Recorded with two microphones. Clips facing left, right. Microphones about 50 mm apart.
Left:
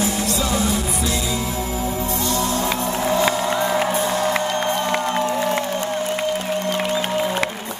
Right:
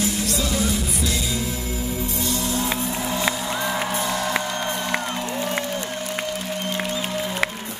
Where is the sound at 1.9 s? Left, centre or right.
Left.